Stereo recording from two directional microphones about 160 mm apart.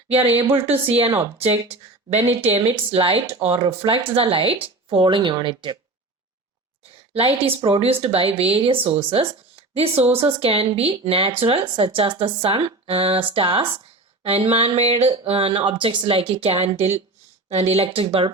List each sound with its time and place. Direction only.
0.6 s a woman's voice: 10° right (ahead or behind)
1.4 s speech: 40° right (ahead or behind)
7.1 s speech: 35° right (ahead or behind)